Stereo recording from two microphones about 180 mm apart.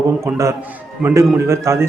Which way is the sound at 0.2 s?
15° right (ahead or behind).